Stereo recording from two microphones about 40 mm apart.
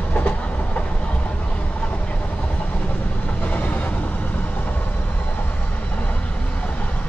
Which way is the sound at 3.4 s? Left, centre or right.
Left.